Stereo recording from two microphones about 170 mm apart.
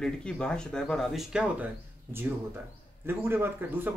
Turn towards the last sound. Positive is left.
turn(degrees=-10)  # may be behind; listen again after turning